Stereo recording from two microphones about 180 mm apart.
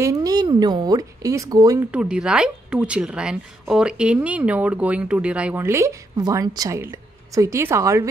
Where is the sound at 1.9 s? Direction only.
5° right (ahead or behind).